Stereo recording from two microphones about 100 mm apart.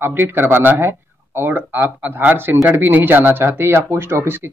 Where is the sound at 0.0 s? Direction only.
20° right (ahead or behind).